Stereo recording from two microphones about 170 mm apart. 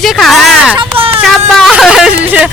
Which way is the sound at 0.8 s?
35° right (ahead or behind).